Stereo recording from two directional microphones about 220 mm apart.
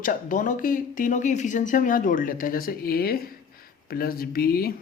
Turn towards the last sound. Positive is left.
turn(degrees=40)  # may be behind; listen again after turning